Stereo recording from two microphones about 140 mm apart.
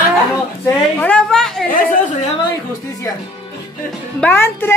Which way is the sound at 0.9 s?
10° left (ahead or behind).